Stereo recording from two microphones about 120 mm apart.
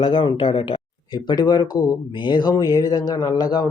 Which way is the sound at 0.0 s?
40° left (ahead or behind).